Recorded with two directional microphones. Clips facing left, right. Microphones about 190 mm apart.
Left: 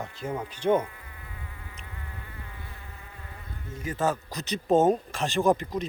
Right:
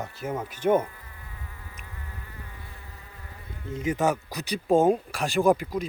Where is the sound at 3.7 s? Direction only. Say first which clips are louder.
Right 3 dB; 20° right (ahead or behind).